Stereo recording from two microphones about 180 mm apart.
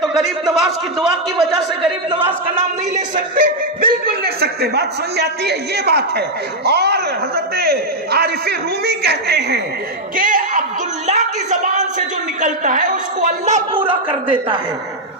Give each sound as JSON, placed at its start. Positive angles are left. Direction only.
{"t": 0.5, "sound": "a man's voice", "side_deg": 0}
{"t": 2.0, "sound": "a man's voice", "side_deg": -30}
{"t": 3.3, "sound": "a man's voice", "side_deg": -50}
{"t": 10.2, "sound": "a woman's voice", "side_deg": -45}
{"t": 13.7, "sound": "a man's voice", "side_deg": -30}